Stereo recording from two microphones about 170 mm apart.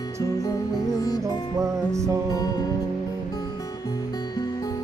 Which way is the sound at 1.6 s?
20° right (ahead or behind).